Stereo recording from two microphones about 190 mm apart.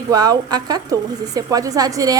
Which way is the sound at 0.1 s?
20° right (ahead or behind).